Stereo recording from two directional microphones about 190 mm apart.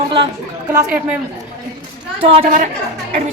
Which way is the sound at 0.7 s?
15° right (ahead or behind).